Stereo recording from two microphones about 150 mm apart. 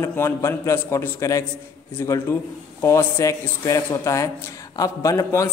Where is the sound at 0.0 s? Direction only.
15° left (ahead or behind).